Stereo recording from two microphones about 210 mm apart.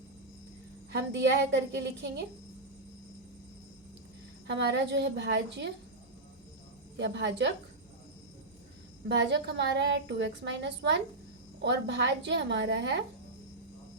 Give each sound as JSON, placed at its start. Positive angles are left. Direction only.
{"t": 0.9, "sound": "a woman's voice", "side_deg": -55}
{"t": 4.4, "sound": "a woman's voice", "side_deg": -55}
{"t": 6.9, "sound": "a woman's voice", "side_deg": -55}
{"t": 9.0, "sound": "a woman's voice", "side_deg": -55}